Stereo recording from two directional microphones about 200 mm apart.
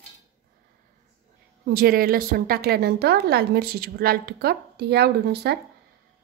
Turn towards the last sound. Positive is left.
turn(degrees=-55)  # may be behind; listen again after turning